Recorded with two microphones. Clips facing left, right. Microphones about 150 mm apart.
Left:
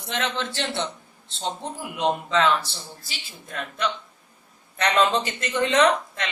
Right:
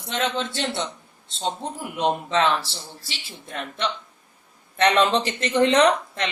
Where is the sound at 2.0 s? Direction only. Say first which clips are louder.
Even; 25° right (ahead or behind).